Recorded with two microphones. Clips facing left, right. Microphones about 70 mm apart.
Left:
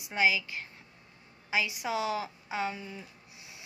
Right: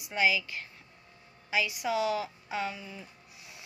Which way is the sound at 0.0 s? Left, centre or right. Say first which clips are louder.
Even; left.